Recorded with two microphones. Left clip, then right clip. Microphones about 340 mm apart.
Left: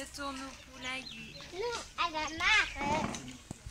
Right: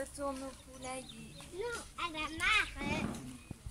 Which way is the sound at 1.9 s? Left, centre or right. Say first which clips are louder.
Left 5 dB; centre.